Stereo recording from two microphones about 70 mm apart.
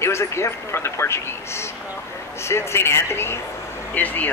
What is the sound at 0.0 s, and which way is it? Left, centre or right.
Speech, left.